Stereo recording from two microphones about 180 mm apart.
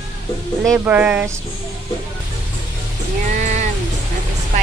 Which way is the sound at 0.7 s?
10° right (ahead or behind).